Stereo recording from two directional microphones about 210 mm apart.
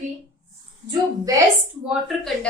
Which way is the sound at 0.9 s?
15° right (ahead or behind).